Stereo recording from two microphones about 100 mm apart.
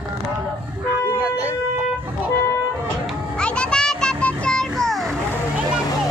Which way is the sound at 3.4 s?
10° left (ahead or behind).